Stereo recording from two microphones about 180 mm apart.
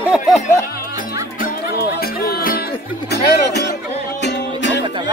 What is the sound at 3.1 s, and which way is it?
Music, 70° left (ahead or behind).